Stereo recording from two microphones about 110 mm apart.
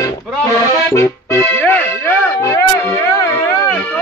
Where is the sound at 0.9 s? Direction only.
25° left (ahead or behind).